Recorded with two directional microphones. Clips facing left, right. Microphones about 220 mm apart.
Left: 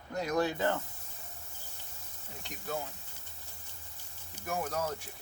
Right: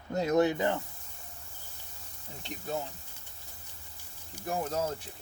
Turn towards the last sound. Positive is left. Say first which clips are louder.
# right 3 dB
turn(degrees=-25)  # may be behind; listen again after turning